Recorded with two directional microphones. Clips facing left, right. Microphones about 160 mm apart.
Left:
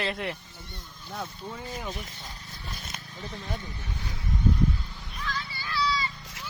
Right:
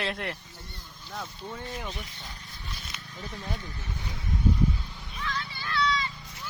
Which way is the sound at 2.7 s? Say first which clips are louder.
Left 2 dB; 45° left (ahead or behind).